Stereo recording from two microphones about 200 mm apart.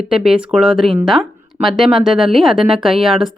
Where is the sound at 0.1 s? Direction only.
5° right (ahead or behind).